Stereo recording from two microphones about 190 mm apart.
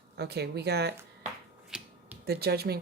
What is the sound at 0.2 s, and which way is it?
Speech, 60° right (ahead or behind).